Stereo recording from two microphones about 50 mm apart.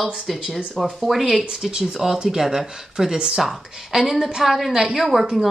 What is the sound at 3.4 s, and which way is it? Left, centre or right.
A woman's voice, centre.